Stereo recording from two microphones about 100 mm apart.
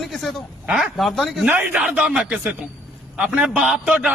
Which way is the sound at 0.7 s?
Centre (ahead or behind).